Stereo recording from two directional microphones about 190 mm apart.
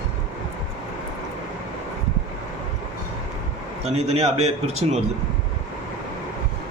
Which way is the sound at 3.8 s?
35° right (ahead or behind).